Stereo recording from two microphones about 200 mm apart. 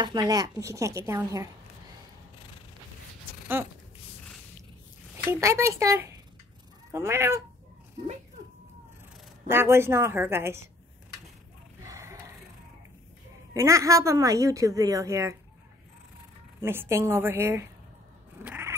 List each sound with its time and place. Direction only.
0.0 s a woman's voice: 20° right (ahead or behind)
5.1 s a woman's voice: 15° right (ahead or behind)
9.5 s a woman's voice: 10° right (ahead or behind)
11.8 s a sound: 15° right (ahead or behind)
13.5 s a woman's voice: 15° right (ahead or behind)
16.6 s a woman's voice: 10° right (ahead or behind)
18.4 s cat: 5° right (ahead or behind)